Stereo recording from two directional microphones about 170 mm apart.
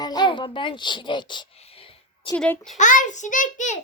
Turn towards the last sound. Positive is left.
turn(degrees=50)  # may be behind; listen again after turning